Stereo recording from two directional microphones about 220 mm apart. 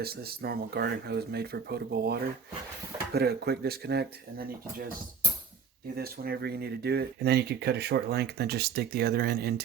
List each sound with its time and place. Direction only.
0.0 s speech: 45° right (ahead or behind)
6.0 s speech: 45° right (ahead or behind)